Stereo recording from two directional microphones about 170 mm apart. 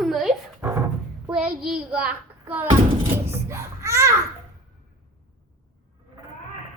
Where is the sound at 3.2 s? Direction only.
15° right (ahead or behind).